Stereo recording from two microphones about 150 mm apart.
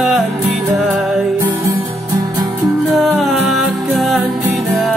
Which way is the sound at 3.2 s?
Centre (ahead or behind).